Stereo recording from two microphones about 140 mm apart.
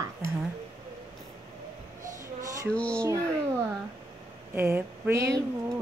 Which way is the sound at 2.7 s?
10° left (ahead or behind).